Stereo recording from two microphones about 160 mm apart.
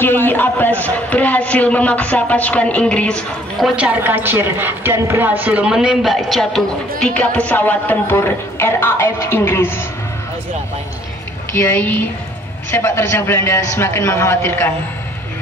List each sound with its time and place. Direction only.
0.0 s a man's voice: 15° left (ahead or behind)
11.5 s a man's voice: 15° left (ahead or behind)